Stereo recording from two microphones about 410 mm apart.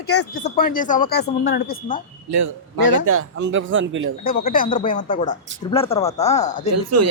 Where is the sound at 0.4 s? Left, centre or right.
Left.